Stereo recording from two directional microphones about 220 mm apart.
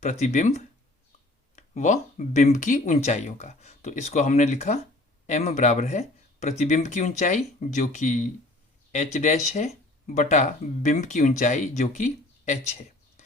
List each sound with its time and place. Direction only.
0.0 s speech: 30° left (ahead or behind)